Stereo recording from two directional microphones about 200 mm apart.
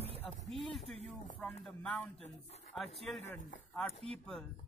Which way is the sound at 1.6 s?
5° left (ahead or behind).